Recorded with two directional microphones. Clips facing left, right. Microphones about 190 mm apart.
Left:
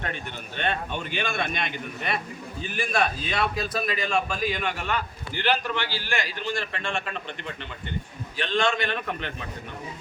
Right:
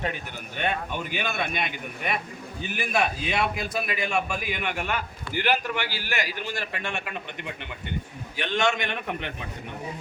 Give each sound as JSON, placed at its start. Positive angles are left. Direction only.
{"t": 0.5, "sound": "a man's voice", "side_deg": -10}